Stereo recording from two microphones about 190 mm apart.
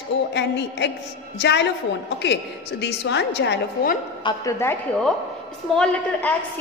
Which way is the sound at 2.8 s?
65° left (ahead or behind).